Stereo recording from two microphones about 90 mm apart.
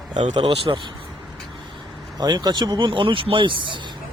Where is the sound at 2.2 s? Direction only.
50° right (ahead or behind).